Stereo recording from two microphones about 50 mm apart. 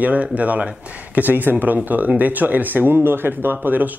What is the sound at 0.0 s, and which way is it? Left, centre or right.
Speech, right.